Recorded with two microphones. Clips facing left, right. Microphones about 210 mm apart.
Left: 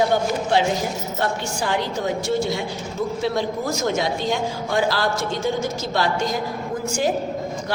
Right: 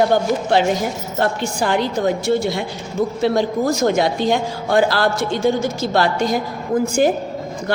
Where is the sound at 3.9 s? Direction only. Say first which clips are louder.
Right 3 dB; 60° right (ahead or behind).